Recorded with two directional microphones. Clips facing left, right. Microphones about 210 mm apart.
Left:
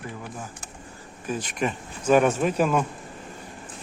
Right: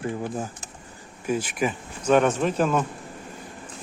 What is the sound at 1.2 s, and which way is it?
Speech, 10° right (ahead or behind).